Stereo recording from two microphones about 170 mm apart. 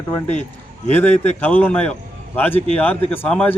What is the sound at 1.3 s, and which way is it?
Speech, 10° left (ahead or behind).